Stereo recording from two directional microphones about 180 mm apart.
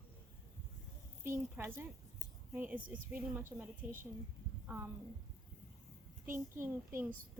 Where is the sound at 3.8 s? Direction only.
45° right (ahead or behind).